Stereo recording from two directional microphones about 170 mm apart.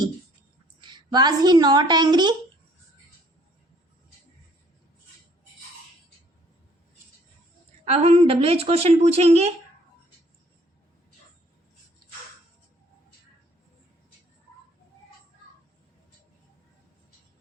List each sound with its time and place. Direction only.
0.8 s a woman's voice: 25° right (ahead or behind)
7.9 s a woman's voice: 40° right (ahead or behind)